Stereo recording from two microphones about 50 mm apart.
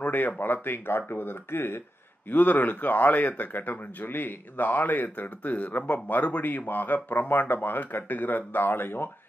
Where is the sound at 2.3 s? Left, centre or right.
Left.